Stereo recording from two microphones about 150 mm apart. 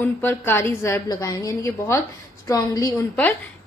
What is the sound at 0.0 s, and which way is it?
A woman's voice, 15° left (ahead or behind).